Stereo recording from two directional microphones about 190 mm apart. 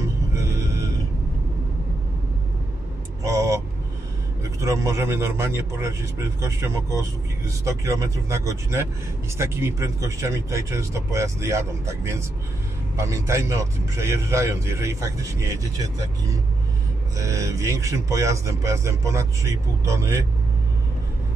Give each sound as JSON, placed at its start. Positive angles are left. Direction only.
{"t": 0.3, "sound": "music", "side_deg": -15}
{"t": 3.3, "sound": "vehicle", "side_deg": -15}
{"t": 4.4, "sound": "a man's voice", "side_deg": -15}